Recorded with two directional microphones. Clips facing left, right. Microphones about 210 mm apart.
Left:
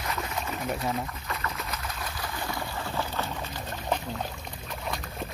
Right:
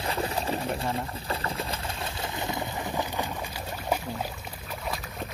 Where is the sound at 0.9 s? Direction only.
30° right (ahead or behind).